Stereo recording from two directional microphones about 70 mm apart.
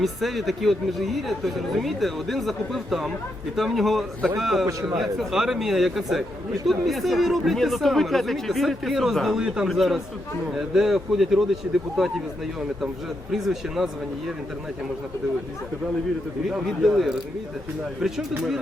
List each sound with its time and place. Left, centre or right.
0.0 s speech: centre
11.6 s speech: centre
13.3 s speech: centre
16.5 s speech: centre